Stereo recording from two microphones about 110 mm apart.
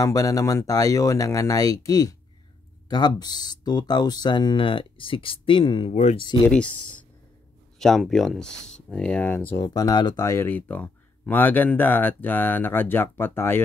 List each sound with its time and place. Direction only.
0.0 s speech: 30° left (ahead or behind); by 6.4 s 50° left (ahead or behind)
6.5 s speech: 10° left (ahead or behind)
9.6 s speech: 35° left (ahead or behind)
10.2 s speech: 20° left (ahead or behind)